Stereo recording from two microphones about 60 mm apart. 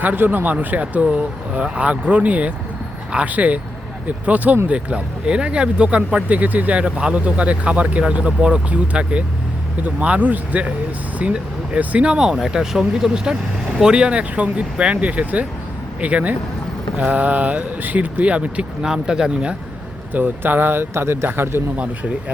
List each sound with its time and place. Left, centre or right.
0.0 s speech: right; by 19.5 s centre
20.1 s speech: right